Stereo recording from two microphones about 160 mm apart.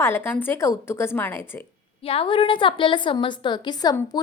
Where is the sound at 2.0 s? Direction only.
35° left (ahead or behind).